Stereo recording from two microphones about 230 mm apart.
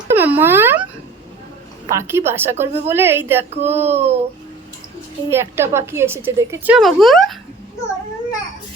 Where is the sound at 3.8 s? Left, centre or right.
Right.